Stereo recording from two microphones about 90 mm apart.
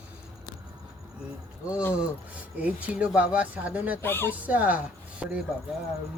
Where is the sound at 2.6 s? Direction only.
15° right (ahead or behind).